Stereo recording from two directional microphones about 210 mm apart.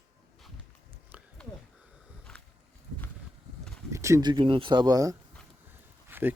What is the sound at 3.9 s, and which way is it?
Speech, 15° right (ahead or behind).